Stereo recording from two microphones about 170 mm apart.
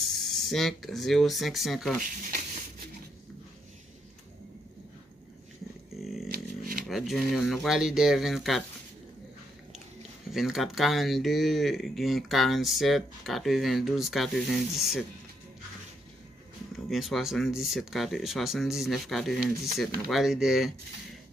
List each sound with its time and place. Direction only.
0.1 s speech: centre (ahead or behind)
6.3 s a sound: 55° right (ahead or behind)
6.9 s speech: centre (ahead or behind)
10.3 s speech: centre (ahead or behind)
16.7 s speech: centre (ahead or behind)